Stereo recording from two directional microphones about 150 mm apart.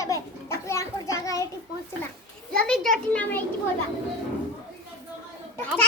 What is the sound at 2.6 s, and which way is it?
Speech, centre (ahead or behind).